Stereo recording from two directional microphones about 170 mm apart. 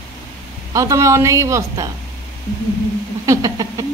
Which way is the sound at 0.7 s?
20° right (ahead or behind).